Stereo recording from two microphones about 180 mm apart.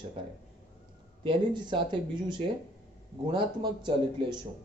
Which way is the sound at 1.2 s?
25° right (ahead or behind).